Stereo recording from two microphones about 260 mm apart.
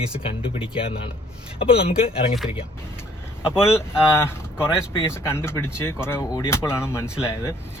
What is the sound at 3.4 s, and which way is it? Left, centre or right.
Speech, centre.